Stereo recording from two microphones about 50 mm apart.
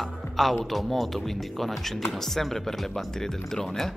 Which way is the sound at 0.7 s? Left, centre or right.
Centre.